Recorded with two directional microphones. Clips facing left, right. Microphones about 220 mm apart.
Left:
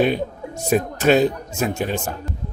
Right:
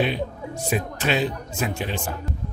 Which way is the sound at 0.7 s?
45° left (ahead or behind).